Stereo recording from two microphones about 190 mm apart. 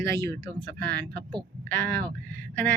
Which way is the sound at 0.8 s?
60° right (ahead or behind).